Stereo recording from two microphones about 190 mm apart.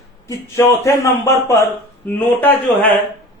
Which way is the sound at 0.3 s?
15° left (ahead or behind).